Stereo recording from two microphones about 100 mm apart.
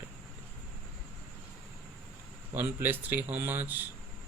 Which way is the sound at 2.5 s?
20° right (ahead or behind).